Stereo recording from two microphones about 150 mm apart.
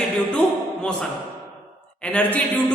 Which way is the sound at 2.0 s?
10° left (ahead or behind).